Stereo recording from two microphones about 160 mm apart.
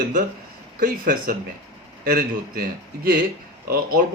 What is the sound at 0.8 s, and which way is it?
Speech, 60° right (ahead or behind).